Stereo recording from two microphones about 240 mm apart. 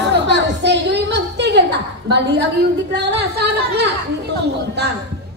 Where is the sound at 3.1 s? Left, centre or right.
Right.